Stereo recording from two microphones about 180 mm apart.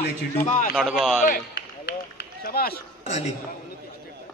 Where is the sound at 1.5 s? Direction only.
65° left (ahead or behind).